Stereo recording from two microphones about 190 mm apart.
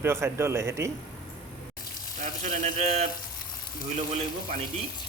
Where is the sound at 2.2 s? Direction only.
40° right (ahead or behind).